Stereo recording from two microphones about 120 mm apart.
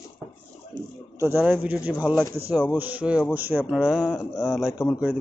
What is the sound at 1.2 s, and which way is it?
A man's voice, 15° right (ahead or behind).